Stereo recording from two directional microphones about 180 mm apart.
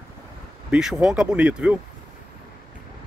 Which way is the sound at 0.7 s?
5° right (ahead or behind).